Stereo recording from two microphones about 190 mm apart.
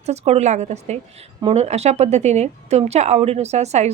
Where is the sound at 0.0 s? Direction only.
35° right (ahead or behind).